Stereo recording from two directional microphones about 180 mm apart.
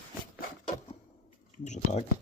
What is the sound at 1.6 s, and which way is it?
Speech, 40° left (ahead or behind).